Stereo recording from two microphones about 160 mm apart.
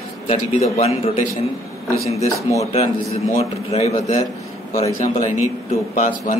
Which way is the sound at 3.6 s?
40° left (ahead or behind).